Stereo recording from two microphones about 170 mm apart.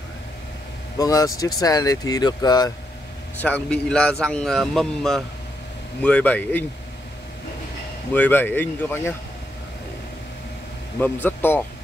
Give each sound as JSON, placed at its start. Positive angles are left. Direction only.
{"t": 0.9, "sound": "speech", "side_deg": 20}
{"t": 3.3, "sound": "a man's voice", "side_deg": 10}
{"t": 8.1, "sound": "speech", "side_deg": 10}
{"t": 11.0, "sound": "speech", "side_deg": 10}